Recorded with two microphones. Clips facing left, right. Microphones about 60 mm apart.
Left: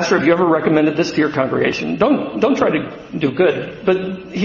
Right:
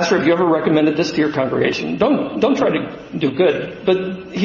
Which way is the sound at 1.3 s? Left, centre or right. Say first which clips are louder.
Even; centre.